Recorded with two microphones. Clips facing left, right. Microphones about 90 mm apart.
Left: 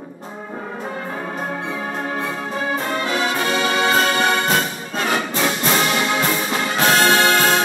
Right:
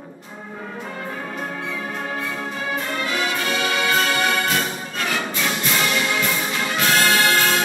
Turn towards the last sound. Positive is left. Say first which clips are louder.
# left 3 dB
turn(degrees=25)  # may be behind; listen again after turning